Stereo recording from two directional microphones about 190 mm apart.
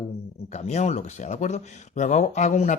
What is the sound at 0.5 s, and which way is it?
Speech, 35° left (ahead or behind).